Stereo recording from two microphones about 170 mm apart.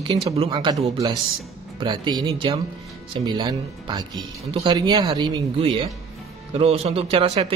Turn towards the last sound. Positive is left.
turn(degrees=-35)  # may be behind; listen again after turning